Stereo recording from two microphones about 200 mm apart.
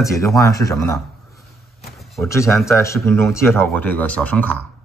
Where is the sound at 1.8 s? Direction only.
Centre (ahead or behind).